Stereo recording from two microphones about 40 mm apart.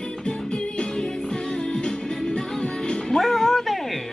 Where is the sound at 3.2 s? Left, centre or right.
Centre.